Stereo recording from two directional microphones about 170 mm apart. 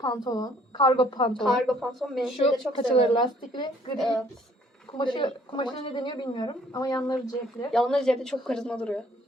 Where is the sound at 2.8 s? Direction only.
30° left (ahead or behind).